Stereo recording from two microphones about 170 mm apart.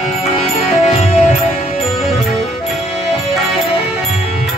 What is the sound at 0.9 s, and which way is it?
Music, 45° left (ahead or behind).